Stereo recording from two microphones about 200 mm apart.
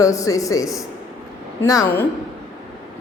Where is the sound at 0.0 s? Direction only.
15° left (ahead or behind).